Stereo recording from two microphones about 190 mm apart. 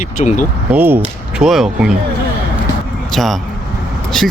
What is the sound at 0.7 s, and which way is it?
Speech, 10° right (ahead or behind).